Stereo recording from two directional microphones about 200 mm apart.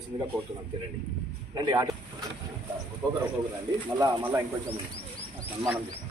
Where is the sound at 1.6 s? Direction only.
20° right (ahead or behind).